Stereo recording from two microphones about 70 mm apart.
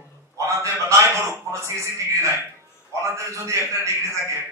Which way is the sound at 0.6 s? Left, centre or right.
Right.